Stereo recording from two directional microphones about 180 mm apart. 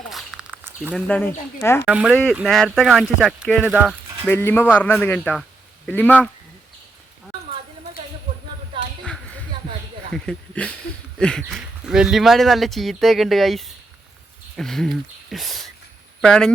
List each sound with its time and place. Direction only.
0.1 s a sound: centre (ahead or behind)
0.9 s a man's voice: 5° left (ahead or behind)
1.8 s speech: 5° right (ahead or behind)
4.3 s a man's voice: 10° left (ahead or behind)
8.7 s a sound: 25° right (ahead or behind)
10.1 s speech: 5° left (ahead or behind)